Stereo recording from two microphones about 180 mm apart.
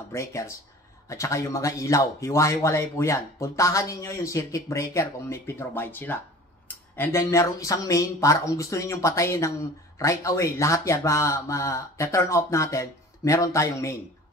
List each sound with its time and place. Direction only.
0.1 s speech: 15° left (ahead or behind)